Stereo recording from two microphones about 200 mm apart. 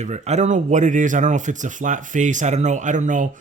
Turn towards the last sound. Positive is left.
turn(degrees=-40)  # may be behind; listen again after turning